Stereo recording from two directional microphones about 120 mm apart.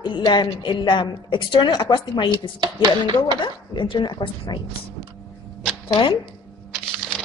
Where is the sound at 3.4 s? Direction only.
40° left (ahead or behind).